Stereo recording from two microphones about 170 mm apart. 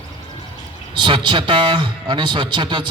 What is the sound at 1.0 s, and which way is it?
A man's voice, 30° right (ahead or behind).